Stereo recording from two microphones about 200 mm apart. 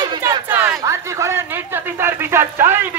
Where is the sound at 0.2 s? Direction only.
10° right (ahead or behind).